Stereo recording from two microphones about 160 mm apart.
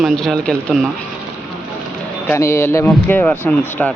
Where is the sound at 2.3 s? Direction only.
15° left (ahead or behind).